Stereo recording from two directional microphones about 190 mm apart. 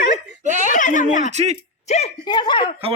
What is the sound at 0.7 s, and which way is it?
A woman's voice, 40° left (ahead or behind).